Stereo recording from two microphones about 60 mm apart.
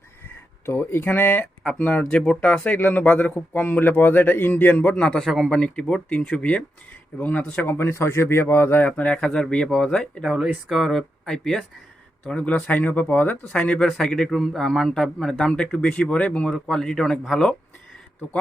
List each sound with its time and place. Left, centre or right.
0.6 s speech: left
2.0 s a man's voice: centre
5.2 s speech: centre
5.5 s speech: centre
7.7 s speech: left
8.9 s speech: left
9.1 s a man's voice: centre
10.2 s a man's voice: centre
12.2 s speech: centre
13.5 s a man's voice: centre
13.8 s a man's voice: centre